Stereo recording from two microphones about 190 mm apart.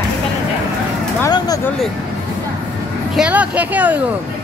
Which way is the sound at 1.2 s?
20° left (ahead or behind).